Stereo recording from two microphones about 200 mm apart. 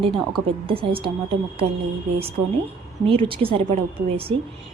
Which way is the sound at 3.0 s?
25° right (ahead or behind).